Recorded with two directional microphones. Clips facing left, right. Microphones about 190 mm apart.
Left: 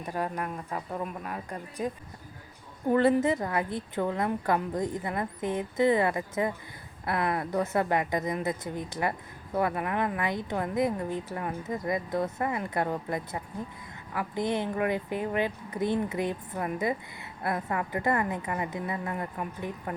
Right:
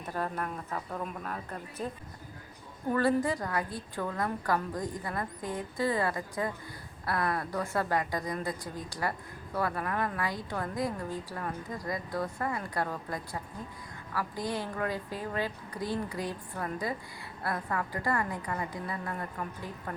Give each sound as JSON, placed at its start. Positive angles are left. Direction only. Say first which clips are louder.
{"t": 0.0, "sound": "speech", "louder": "left 2 dB", "side_deg": 10}
{"t": 2.9, "sound": "a woman's voice", "louder": "left 4 dB", "side_deg": 20}